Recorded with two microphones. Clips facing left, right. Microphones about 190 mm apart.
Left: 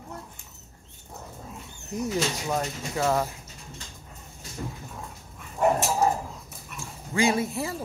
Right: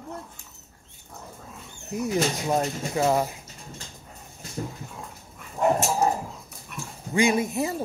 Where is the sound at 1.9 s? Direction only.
10° right (ahead or behind).